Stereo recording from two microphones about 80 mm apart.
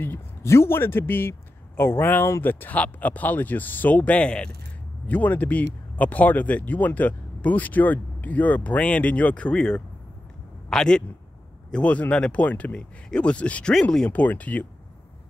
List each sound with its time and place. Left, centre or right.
0.0 s speech: left